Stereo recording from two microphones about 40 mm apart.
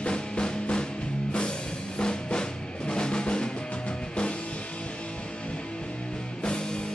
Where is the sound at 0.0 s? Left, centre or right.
Left.